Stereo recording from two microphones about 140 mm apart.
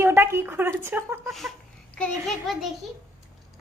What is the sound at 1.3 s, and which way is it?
A woman's voice, centre (ahead or behind).